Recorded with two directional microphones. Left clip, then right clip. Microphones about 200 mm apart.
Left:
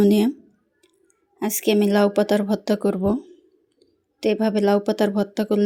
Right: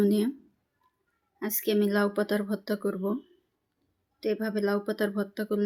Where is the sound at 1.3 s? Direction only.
35° left (ahead or behind).